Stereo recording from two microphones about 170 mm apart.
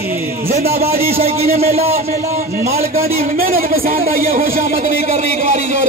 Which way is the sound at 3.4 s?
60° right (ahead or behind).